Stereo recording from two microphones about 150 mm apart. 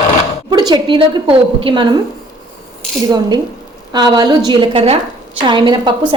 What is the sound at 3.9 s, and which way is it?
A woman's voice, 30° right (ahead or behind).